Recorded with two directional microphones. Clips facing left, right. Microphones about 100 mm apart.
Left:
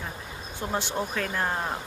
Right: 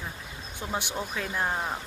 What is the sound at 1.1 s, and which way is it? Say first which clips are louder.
Speech: right 1 dB; 10° right (ahead or behind).